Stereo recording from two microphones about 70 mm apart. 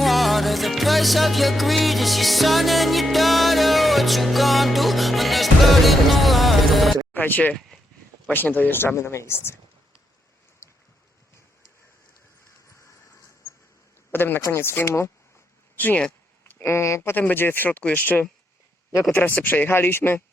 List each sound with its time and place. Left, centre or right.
0.0 s music: centre
7.1 s a sound: left
8.3 s speech: left
14.1 s speech: left
16.6 s speech: left
17.0 s speech: left
19.4 s speech: left